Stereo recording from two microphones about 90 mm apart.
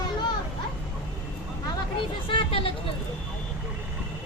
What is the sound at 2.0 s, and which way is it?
Vehicle, 65° left (ahead or behind).